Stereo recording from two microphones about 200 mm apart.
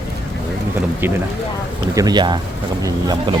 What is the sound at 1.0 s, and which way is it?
Speech, 10° right (ahead or behind).